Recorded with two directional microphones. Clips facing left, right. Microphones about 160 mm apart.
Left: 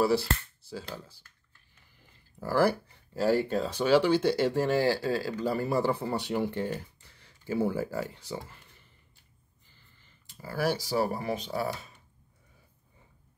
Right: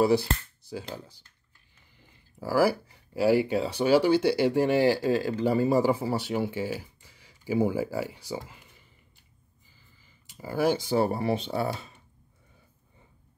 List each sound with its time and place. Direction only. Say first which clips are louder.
0.0 s speech: right 3 dB; 15° right (ahead or behind)
2.4 s speech: right 2 dB; 5° right (ahead or behind)
9.7 s speech: right 1 dB; 10° right (ahead or behind); by 11.9 s 30° right (ahead or behind)